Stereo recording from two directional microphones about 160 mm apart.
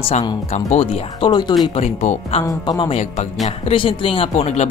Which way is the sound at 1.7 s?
45° left (ahead or behind).